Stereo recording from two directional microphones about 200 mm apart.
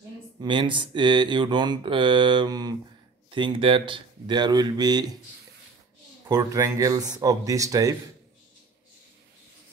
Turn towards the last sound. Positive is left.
turn(degrees=-15)  # may be behind; listen again after turning